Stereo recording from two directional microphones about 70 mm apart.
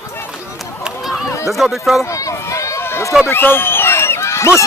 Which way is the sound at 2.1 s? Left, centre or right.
Left.